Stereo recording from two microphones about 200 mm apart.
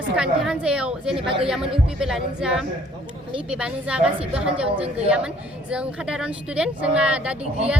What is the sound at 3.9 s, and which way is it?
Speech, 5° right (ahead or behind).